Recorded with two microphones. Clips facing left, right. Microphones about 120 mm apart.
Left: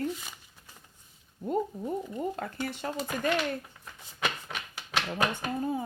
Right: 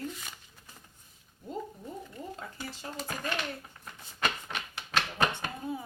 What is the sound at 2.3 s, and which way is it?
Speech, 60° left (ahead or behind).